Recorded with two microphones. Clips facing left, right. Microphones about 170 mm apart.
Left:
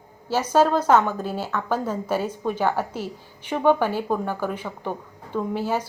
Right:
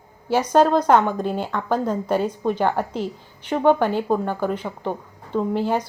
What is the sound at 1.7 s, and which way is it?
A woman's voice, 10° left (ahead or behind).